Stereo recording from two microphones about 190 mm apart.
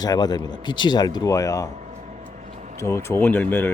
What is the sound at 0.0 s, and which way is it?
Speech, 20° left (ahead or behind).